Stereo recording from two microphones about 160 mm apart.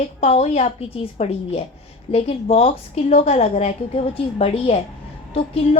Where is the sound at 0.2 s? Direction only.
40° left (ahead or behind).